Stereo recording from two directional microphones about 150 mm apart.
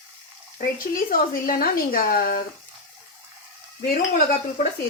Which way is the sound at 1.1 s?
75° left (ahead or behind).